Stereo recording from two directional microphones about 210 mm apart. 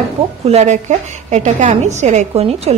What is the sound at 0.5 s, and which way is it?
A woman's voice, 35° right (ahead or behind).